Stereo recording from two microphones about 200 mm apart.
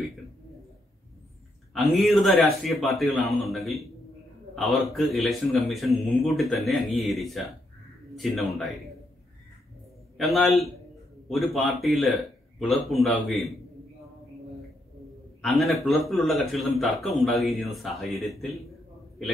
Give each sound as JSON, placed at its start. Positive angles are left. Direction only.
{"t": 1.9, "sound": "a man's voice", "side_deg": 0}
{"t": 4.9, "sound": "a man's voice", "side_deg": 0}
{"t": 10.1, "sound": "a man's voice", "side_deg": 0}
{"t": 15.4, "sound": "a man's voice", "side_deg": 0}